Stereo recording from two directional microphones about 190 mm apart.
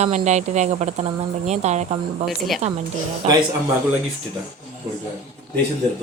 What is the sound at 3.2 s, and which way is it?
Speech, 35° right (ahead or behind).